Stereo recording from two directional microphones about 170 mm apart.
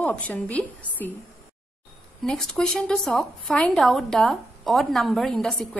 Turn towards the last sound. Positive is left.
turn(degrees=0)  # may be behind; listen again after turning